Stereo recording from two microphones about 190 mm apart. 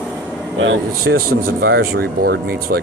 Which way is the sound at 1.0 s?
50° right (ahead or behind).